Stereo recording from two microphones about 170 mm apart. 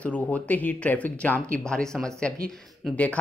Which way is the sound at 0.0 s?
10° left (ahead or behind).